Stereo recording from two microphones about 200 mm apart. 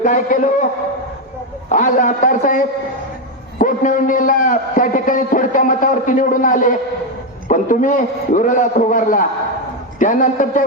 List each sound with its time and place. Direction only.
0.0 s a man's voice: 40° left (ahead or behind)
1.7 s a man's voice: 40° left (ahead or behind)